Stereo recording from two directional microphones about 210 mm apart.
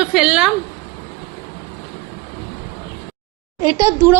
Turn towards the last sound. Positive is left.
turn(degrees=-10)  # may be behind; listen again after turning